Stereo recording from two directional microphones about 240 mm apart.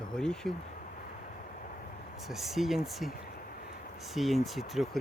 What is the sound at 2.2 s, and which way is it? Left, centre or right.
Speech, centre.